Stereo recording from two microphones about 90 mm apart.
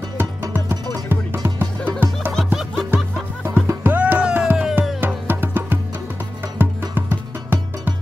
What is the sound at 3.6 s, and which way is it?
Music, 20° right (ahead or behind).